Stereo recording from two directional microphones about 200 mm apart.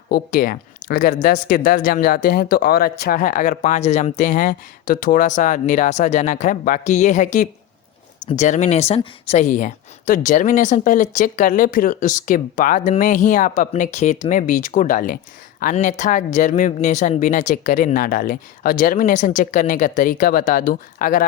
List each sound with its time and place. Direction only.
0.1 s speech: 45° left (ahead or behind)